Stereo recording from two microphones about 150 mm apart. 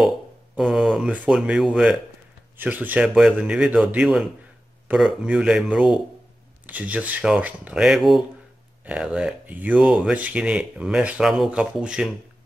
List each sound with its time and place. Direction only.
0.6 s speech: centre (ahead or behind)